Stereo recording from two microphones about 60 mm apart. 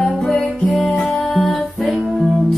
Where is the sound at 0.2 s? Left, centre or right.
Left.